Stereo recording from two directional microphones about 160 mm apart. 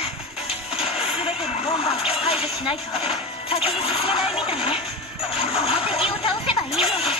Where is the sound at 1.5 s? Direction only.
35° left (ahead or behind).